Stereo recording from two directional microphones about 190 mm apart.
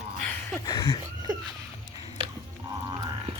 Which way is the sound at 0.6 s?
15° left (ahead or behind).